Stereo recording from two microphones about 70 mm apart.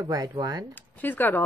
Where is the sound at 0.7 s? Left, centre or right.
Left.